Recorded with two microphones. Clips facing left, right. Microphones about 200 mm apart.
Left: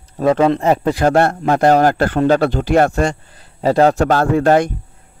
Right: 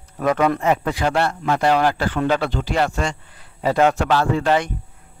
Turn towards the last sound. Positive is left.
turn(degrees=45)  # may be behind; listen again after turning